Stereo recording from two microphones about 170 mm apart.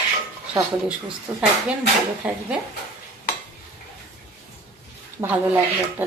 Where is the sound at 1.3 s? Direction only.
10° right (ahead or behind).